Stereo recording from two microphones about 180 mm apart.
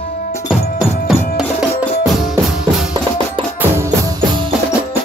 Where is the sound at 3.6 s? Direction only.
15° right (ahead or behind).